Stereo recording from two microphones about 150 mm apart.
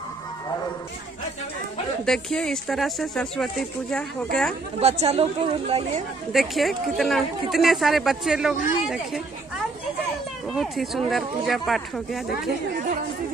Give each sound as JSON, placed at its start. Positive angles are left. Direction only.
{"t": 2.0, "sound": "speech", "side_deg": 5}
{"t": 4.7, "sound": "speech", "side_deg": -45}
{"t": 6.3, "sound": "speech", "side_deg": 0}
{"t": 10.5, "sound": "speech", "side_deg": 0}